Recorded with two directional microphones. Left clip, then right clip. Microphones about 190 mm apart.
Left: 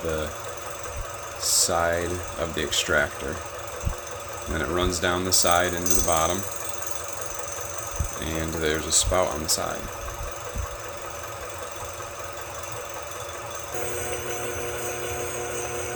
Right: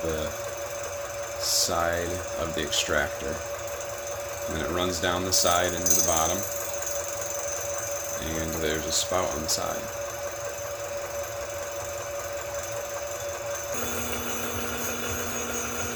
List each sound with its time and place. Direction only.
1.5 s speech: 15° left (ahead or behind)
4.5 s speech: 20° left (ahead or behind)
8.6 s speech: 20° left (ahead or behind)